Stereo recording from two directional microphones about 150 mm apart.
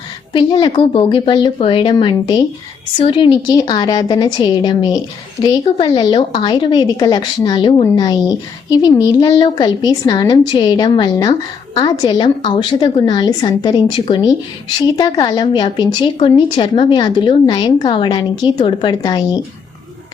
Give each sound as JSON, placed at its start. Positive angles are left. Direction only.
{"t": 0.3, "sound": "a woman's voice", "side_deg": 35}